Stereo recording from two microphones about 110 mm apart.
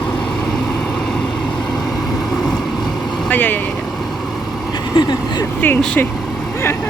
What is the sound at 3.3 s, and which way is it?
Vehicle, 15° left (ahead or behind).